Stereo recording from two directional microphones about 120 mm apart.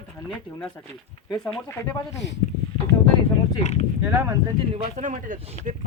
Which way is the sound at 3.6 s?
70° left (ahead or behind).